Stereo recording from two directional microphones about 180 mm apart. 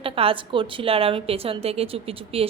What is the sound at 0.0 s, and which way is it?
A woman's voice, 30° right (ahead or behind).